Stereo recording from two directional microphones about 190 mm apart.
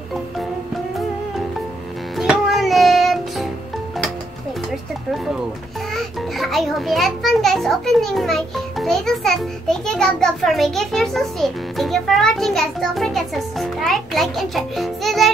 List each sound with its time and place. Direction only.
2.1 s music: centre (ahead or behind)
5.9 s a child's voice: centre (ahead or behind)